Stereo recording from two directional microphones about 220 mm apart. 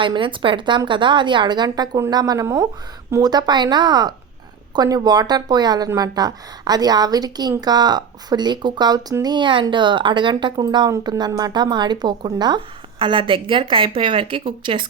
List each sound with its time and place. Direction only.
0.0 s speech: 20° right (ahead or behind)